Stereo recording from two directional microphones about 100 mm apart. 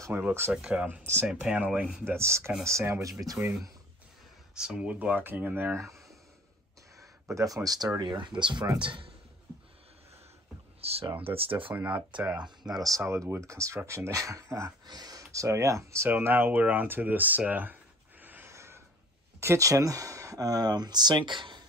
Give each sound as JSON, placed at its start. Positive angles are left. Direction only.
{"t": 0.1, "sound": "speech", "side_deg": -20}
{"t": 2.0, "sound": "speech", "side_deg": -25}
{"t": 4.6, "sound": "speech", "side_deg": -10}
{"t": 7.0, "sound": "a man's voice", "side_deg": -30}
{"t": 10.8, "sound": "speech", "side_deg": -85}
{"t": 11.7, "sound": "speech", "side_deg": -15}
{"t": 12.7, "sound": "speech", "side_deg": -35}
{"t": 18.2, "sound": "gasp", "side_deg": -20}
{"t": 19.4, "sound": "speech", "side_deg": -30}